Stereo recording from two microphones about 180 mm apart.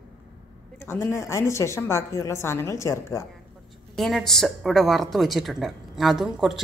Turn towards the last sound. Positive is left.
turn(degrees=0)  # may be behind; listen again after turning